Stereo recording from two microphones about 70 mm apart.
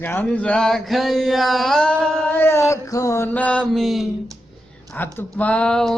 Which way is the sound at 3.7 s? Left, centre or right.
Centre.